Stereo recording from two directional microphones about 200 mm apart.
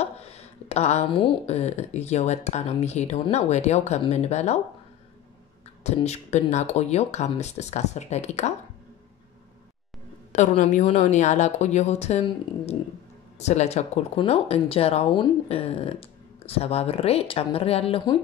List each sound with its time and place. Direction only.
0.0 s speech: 30° left (ahead or behind)
5.9 s speech: 35° left (ahead or behind)
10.3 s speech: 35° left (ahead or behind)